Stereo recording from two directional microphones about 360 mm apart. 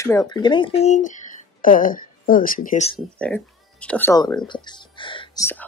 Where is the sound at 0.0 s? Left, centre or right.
Centre.